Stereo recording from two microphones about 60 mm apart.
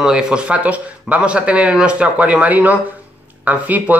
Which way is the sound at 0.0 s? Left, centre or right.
Centre.